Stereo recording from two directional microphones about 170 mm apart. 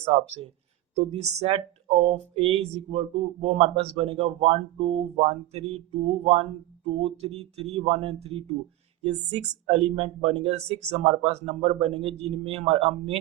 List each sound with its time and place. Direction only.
0.0 s speech: 35° right (ahead or behind)